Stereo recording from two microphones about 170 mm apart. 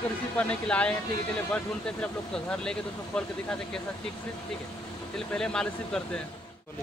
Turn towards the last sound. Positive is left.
turn(degrees=5)  # may be behind; listen again after turning